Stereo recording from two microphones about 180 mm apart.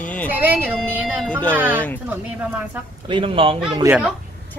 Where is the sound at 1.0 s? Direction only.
5° left (ahead or behind).